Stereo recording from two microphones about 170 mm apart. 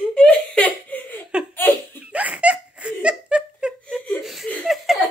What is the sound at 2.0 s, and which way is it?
Laughter, 5° right (ahead or behind).